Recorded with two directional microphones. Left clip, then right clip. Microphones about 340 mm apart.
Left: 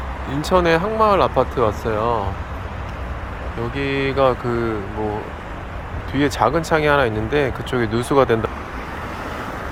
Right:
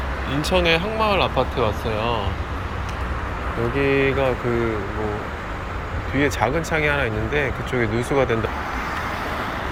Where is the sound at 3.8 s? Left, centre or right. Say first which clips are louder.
Left 1 dB; centre.